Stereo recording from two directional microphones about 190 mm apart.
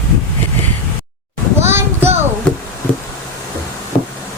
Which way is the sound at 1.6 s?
10° right (ahead or behind).